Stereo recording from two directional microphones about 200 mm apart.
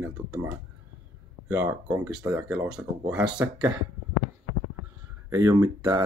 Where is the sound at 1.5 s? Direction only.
10° right (ahead or behind).